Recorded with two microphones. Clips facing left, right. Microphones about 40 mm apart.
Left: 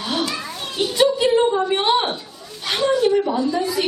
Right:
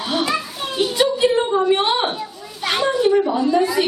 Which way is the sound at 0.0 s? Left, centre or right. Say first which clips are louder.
Right 3 dB; centre.